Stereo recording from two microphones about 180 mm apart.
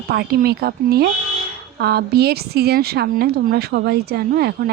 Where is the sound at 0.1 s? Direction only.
60° right (ahead or behind).